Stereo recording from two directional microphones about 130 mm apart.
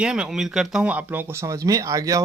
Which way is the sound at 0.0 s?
5° right (ahead or behind).